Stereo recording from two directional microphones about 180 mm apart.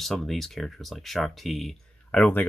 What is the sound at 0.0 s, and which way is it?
Speech, centre (ahead or behind).